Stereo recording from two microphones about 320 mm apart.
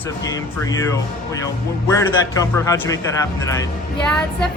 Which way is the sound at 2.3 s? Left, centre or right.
Centre.